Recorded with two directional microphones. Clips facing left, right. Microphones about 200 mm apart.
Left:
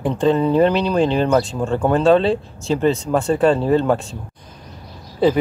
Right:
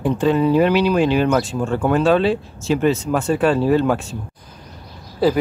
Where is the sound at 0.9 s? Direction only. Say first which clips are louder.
Even; 30° left (ahead or behind).